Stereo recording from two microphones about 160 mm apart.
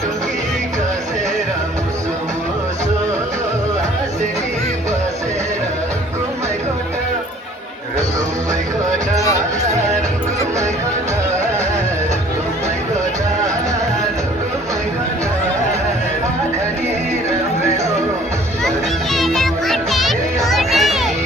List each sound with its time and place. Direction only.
19.1 s music: centre (ahead or behind)